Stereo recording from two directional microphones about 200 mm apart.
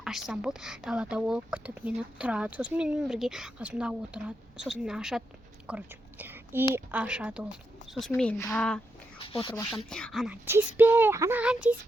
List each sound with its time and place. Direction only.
0.0 s speech: centre (ahead or behind)
5.6 s whispering: 10° right (ahead or behind)
6.7 s speech: 5° right (ahead or behind)
9.1 s speech: 25° left (ahead or behind)
9.7 s speech: 5° left (ahead or behind)
10.4 s speech: 10° right (ahead or behind)